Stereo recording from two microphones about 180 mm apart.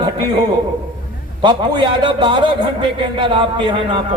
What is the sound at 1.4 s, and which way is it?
A man's voice, 25° right (ahead or behind).